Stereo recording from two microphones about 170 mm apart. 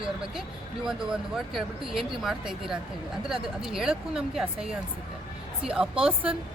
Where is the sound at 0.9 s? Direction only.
5° right (ahead or behind).